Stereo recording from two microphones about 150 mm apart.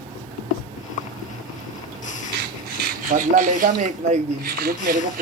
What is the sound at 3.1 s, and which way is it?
Speech, 60° right (ahead or behind).